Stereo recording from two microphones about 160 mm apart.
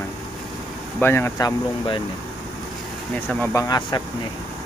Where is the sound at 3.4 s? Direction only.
20° left (ahead or behind).